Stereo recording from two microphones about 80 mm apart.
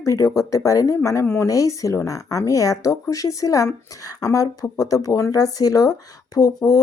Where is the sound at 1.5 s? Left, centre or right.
Left.